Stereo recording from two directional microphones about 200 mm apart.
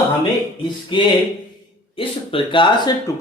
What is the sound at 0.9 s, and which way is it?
Speech, 25° left (ahead or behind).